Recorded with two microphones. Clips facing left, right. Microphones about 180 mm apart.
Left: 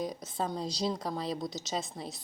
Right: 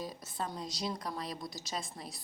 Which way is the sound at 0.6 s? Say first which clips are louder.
Left 5 dB; 25° left (ahead or behind).